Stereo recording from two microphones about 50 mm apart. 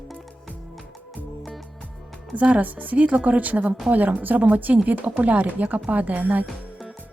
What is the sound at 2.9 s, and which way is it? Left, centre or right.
A woman's voice, right.